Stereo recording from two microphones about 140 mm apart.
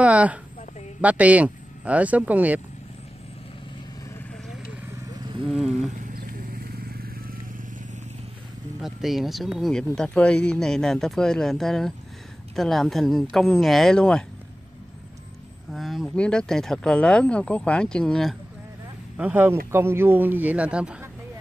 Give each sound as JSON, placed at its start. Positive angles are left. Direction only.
{"t": 0.0, "sound": "a sound", "side_deg": -10}
{"t": 1.0, "sound": "speech", "side_deg": -10}
{"t": 5.4, "sound": "speech", "side_deg": -5}
{"t": 6.6, "sound": "vehicle", "side_deg": -90}
{"t": 8.7, "sound": "speech", "side_deg": 0}
{"t": 15.7, "sound": "speech", "side_deg": 0}
{"t": 19.1, "sound": "speech", "side_deg": -10}